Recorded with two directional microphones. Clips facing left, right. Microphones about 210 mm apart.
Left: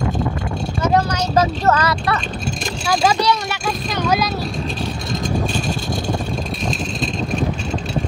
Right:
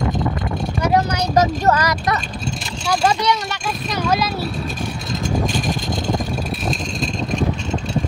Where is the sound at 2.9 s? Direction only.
5° left (ahead or behind).